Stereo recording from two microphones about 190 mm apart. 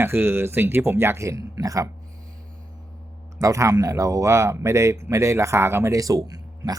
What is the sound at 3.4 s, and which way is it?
Speech, 15° right (ahead or behind).